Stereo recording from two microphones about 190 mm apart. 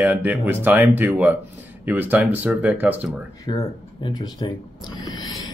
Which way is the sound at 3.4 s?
20° left (ahead or behind).